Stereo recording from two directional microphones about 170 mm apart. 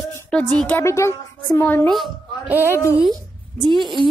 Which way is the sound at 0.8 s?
15° left (ahead or behind).